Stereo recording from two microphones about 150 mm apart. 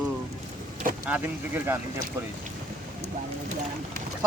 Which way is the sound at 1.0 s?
10° right (ahead or behind).